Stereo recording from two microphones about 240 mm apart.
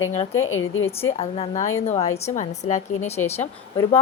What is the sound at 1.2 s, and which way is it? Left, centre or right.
A woman's voice, left.